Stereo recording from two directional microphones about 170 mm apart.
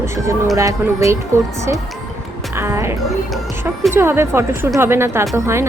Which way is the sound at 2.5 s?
15° right (ahead or behind).